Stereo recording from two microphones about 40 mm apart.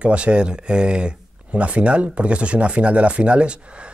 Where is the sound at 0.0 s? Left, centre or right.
Right.